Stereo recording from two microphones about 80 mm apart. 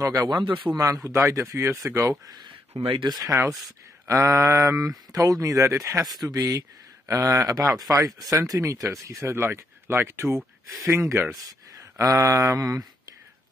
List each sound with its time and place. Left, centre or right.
0.0 s speech: right
0.3 s a man's voice: right
0.7 s speech: right
2.9 s speech: right
3.3 s speech: right
4.7 s speech: right
6.2 s speech: right
11.3 s speech: right